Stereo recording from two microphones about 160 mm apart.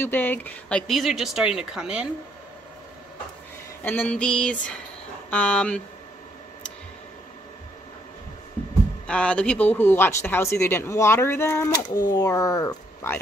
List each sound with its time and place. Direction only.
0.0 s speech: 10° left (ahead or behind); by 2.0 s 5° right (ahead or behind)
3.8 s speech: 10° left (ahead or behind)
9.0 s speech: 5° left (ahead or behind)